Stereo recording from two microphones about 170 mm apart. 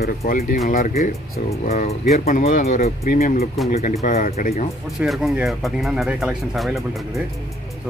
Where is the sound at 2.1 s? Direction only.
50° left (ahead or behind).